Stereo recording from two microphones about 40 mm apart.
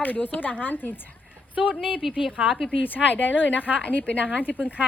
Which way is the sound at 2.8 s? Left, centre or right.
Left.